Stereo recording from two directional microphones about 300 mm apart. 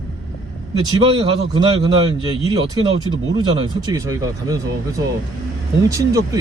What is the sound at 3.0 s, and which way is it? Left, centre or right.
Speech, centre.